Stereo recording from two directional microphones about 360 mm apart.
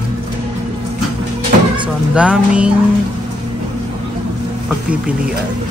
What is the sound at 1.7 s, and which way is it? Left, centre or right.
Speech, centre.